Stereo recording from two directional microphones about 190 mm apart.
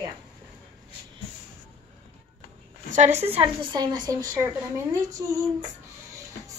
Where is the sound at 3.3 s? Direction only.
30° right (ahead or behind).